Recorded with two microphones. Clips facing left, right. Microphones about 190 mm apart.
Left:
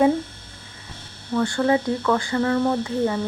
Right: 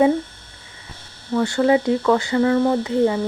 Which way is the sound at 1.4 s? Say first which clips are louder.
Right 3 dB; 15° right (ahead or behind).